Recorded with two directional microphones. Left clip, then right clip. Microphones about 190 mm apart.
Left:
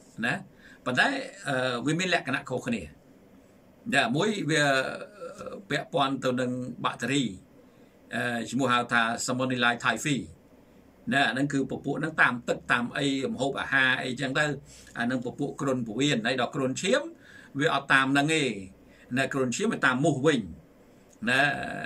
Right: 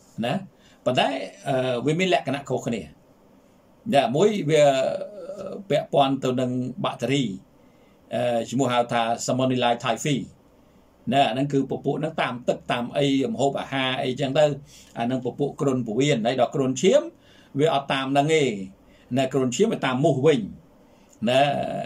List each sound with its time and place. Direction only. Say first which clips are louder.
0.8 s speech: right 3 dB; 10° right (ahead or behind)
3.9 s speech: right 6 dB; 15° right (ahead or behind)
11.1 s speech: right 4 dB; 15° right (ahead or behind)